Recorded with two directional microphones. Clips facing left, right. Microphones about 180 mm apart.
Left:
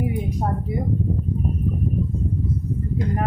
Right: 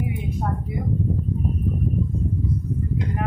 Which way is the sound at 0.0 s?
40° left (ahead or behind).